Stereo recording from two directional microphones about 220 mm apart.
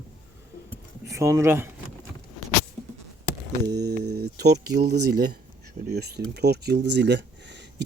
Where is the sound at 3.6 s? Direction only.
45° right (ahead or behind).